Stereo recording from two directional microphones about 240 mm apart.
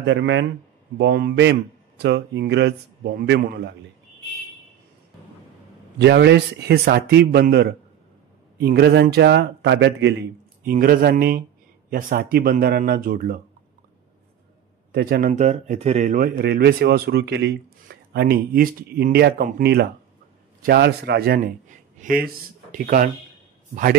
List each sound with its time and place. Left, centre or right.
0.0 s speech: right
5.9 s speech: right
10.6 s a man's voice: right
14.9 s a man's voice: right
16.3 s a man's voice: right